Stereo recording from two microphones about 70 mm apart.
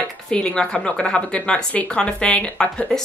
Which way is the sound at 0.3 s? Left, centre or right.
Centre.